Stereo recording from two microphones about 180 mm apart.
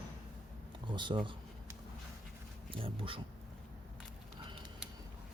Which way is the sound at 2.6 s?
30° right (ahead or behind).